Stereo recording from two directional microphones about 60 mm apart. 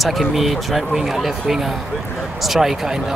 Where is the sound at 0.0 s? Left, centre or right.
Centre.